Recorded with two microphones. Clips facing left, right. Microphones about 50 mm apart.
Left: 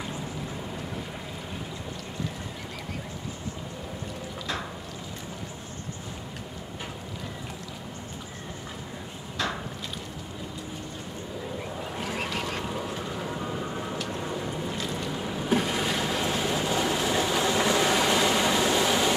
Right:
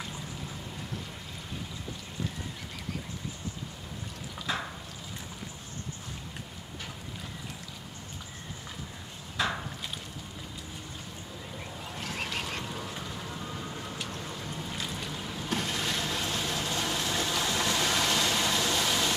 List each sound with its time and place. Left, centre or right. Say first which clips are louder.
9.4 s boat: even; centre
12.0 s duck: left 3 dB; centre
14.0 s vehicle: left 7 dB; left
15.1 s boat: left 8 dB; left